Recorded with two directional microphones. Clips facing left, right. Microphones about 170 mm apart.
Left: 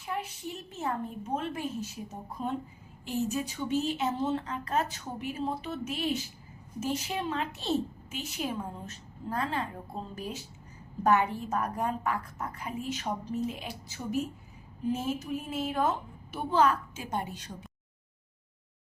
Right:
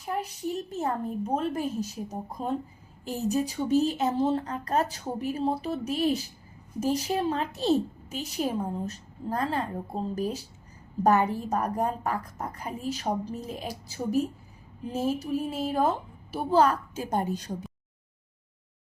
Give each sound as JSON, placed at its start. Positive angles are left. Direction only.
{"t": 0.0, "sound": "a woman's voice", "side_deg": -40}